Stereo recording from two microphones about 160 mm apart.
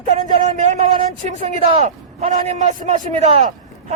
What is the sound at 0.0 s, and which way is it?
A man's voice, 45° right (ahead or behind).